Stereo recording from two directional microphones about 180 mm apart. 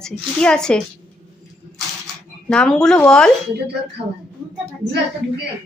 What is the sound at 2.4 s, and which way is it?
Speech, 5° left (ahead or behind).